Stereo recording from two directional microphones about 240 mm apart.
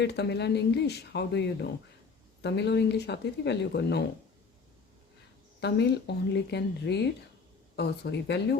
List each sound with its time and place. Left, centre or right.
0.0 s speech: left
5.5 s speech: left